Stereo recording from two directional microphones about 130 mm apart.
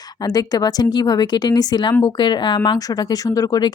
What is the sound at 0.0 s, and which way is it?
Speech, 30° left (ahead or behind).